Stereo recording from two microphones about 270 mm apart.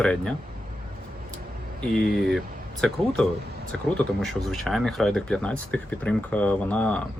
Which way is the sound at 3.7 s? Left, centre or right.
Centre.